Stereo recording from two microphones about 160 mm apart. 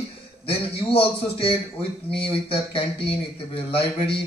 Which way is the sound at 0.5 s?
35° left (ahead or behind).